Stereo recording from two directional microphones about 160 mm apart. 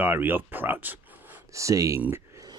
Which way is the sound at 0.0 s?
10° right (ahead or behind).